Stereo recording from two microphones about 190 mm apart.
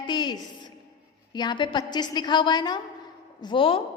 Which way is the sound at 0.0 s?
25° left (ahead or behind).